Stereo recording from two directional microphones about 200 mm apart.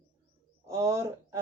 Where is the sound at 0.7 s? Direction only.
15° right (ahead or behind).